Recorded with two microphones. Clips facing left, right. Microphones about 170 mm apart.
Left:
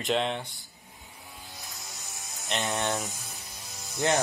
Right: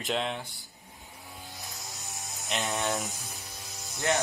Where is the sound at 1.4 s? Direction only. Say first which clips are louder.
Right 2 dB; centre (ahead or behind).